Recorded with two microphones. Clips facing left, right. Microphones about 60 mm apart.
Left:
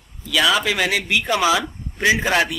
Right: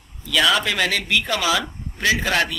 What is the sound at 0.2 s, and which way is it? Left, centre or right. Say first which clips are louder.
Speech: left 1 dB; centre.